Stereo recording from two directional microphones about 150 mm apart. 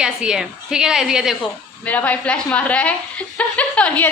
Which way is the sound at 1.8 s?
10° left (ahead or behind).